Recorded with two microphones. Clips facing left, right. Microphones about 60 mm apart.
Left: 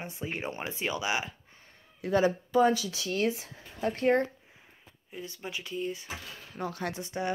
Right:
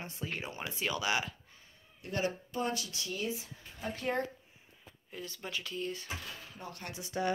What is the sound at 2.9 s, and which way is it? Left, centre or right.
Speech, left.